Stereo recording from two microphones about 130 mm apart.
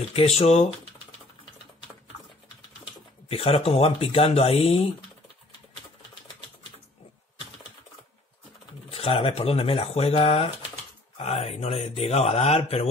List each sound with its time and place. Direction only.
0.1 s speech: 50° left (ahead or behind)
3.3 s speech: 50° left (ahead or behind)
8.9 s speech: 45° left (ahead or behind)